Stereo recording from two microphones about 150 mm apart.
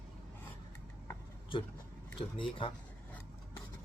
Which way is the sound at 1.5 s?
35° left (ahead or behind).